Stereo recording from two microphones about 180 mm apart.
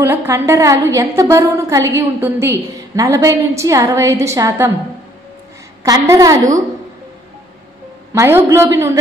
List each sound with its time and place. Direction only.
0.0 s a woman's voice: 15° right (ahead or behind)
5.9 s a woman's voice: 20° right (ahead or behind)
8.1 s a woman's voice: 15° right (ahead or behind)